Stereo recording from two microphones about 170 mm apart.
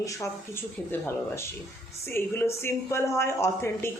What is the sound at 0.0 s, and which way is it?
A woman's voice, 20° left (ahead or behind).